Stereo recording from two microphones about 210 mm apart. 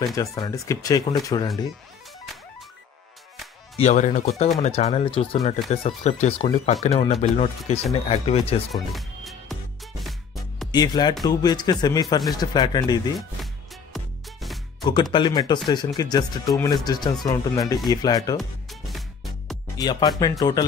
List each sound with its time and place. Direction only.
0.1 s speech: 15° left (ahead or behind)
3.8 s speech: 35° left (ahead or behind)
8.9 s music: centre (ahead or behind)
10.7 s speech: 20° left (ahead or behind)
13.9 s music: centre (ahead or behind)
14.8 s speech: 20° left (ahead or behind)
18.4 s music: centre (ahead or behind)
19.8 s speech: 20° left (ahead or behind)